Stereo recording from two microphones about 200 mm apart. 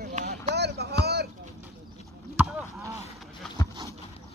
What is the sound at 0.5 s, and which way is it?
Vehicle, 55° right (ahead or behind).